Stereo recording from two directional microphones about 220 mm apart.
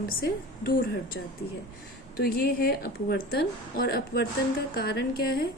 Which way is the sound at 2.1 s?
45° left (ahead or behind).